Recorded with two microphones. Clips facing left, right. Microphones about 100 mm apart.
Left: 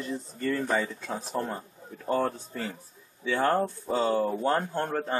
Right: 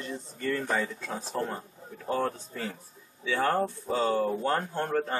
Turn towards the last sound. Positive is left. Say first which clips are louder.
# even
turn(degrees=5)  # may be behind; listen again after turning